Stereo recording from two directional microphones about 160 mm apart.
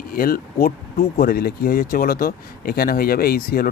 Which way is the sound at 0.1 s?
70° left (ahead or behind).